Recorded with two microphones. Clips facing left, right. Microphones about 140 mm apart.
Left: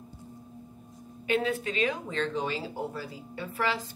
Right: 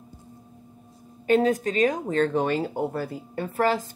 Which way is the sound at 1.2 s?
40° right (ahead or behind).